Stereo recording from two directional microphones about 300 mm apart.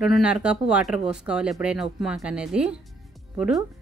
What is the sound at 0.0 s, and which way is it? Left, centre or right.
Speech, centre.